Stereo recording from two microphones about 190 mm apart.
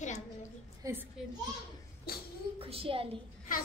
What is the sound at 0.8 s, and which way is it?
Speech, 15° right (ahead or behind).